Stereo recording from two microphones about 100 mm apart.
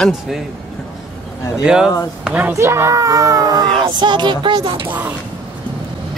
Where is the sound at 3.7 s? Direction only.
50° right (ahead or behind).